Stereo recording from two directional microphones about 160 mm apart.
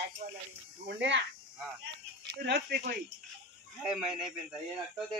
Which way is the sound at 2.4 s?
85° right.